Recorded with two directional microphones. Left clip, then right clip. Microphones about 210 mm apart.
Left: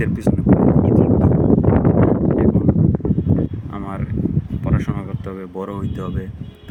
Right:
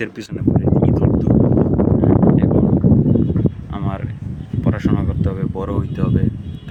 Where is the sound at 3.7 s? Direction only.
5° right (ahead or behind).